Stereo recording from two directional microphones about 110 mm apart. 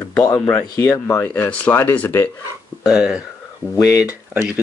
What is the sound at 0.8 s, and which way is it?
Speech, 25° left (ahead or behind).